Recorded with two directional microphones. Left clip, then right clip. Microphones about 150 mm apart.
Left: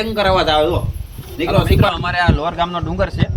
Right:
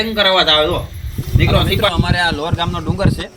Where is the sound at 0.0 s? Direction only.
40° left (ahead or behind).